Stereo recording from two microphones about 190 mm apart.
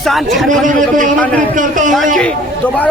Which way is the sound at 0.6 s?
45° right (ahead or behind).